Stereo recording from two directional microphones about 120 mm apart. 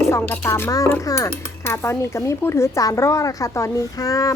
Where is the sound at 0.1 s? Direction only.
25° left (ahead or behind).